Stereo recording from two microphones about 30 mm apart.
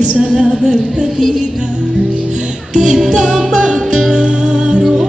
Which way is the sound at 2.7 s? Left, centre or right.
Right.